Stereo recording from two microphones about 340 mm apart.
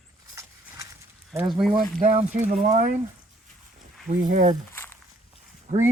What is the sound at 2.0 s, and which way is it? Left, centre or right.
Speech, right.